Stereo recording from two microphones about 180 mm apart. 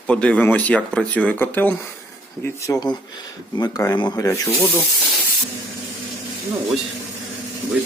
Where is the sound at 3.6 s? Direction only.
20° left (ahead or behind).